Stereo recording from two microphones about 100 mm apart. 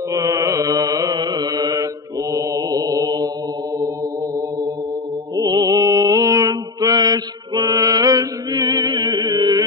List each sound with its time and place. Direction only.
0.1 s mantra: 35° right (ahead or behind)
5.3 s mantra: 40° right (ahead or behind)